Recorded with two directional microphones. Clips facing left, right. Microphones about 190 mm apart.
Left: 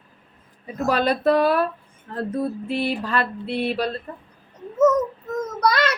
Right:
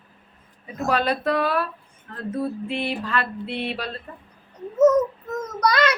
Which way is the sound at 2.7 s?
40° left (ahead or behind).